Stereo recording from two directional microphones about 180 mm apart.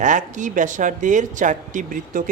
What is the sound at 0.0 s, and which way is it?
A man's voice, 45° right (ahead or behind).